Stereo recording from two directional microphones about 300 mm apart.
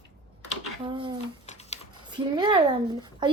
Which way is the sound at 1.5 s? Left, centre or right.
Left.